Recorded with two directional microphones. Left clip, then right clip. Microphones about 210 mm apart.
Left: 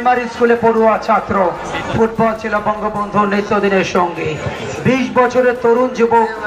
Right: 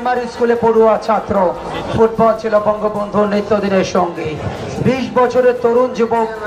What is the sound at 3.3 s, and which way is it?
A man's voice, 55° right (ahead or behind).